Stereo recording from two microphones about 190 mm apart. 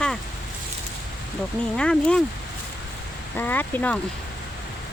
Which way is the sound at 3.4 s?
10° left (ahead or behind).